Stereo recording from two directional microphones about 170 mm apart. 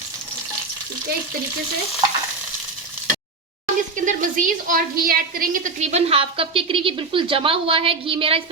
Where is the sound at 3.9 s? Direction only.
50° right (ahead or behind).